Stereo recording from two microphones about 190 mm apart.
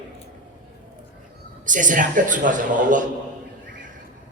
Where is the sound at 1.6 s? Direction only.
45° right (ahead or behind).